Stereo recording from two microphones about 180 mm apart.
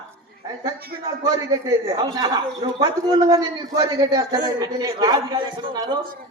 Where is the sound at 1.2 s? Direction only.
20° right (ahead or behind).